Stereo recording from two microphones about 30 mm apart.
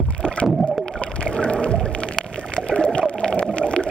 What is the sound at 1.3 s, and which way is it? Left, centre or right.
Rowboat, left.